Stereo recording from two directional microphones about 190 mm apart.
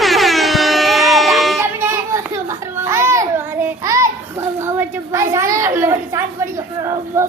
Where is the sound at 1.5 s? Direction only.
15° right (ahead or behind).